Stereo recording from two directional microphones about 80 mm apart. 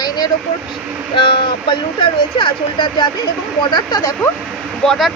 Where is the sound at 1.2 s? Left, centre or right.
Left.